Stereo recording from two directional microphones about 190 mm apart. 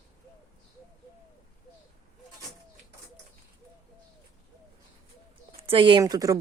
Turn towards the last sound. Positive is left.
turn(degrees=-20)  # may be behind; listen again after turning